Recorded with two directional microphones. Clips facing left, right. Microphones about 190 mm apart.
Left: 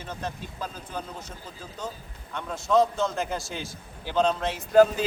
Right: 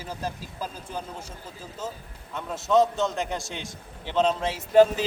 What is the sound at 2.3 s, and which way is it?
Speech, centre (ahead or behind).